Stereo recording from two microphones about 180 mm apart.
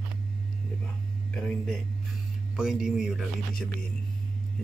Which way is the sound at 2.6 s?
5° right (ahead or behind).